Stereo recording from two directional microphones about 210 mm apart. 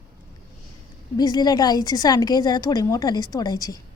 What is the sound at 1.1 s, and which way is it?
A woman's voice, 20° left (ahead or behind).